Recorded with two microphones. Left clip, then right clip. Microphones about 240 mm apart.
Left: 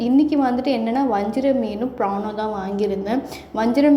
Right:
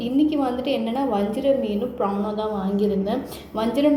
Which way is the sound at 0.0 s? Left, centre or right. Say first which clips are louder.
Left 4 dB; left.